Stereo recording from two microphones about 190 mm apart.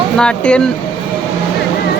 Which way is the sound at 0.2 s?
5° left (ahead or behind).